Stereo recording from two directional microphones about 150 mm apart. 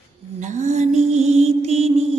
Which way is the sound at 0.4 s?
50° right (ahead or behind).